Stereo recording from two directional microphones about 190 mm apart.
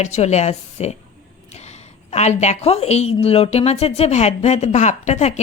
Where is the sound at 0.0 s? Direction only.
35° left (ahead or behind).